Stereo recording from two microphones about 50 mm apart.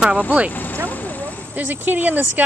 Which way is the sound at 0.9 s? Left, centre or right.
Left.